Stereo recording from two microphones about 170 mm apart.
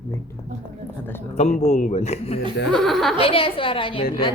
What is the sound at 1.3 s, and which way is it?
A man's voice, 45° left (ahead or behind).